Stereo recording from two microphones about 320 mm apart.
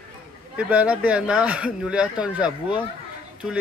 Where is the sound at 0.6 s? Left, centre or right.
Centre.